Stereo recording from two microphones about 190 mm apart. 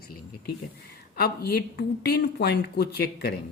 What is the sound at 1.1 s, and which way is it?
Speech, 55° left (ahead or behind).